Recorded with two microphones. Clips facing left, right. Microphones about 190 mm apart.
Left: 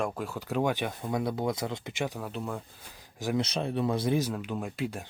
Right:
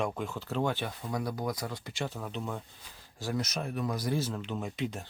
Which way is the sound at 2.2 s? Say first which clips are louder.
Left 2 dB; 5° left (ahead or behind).